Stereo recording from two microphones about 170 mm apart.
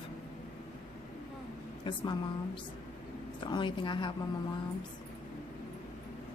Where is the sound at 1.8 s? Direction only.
25° left (ahead or behind).